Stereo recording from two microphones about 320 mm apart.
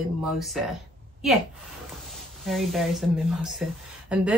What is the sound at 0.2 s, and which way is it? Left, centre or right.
Speech, centre.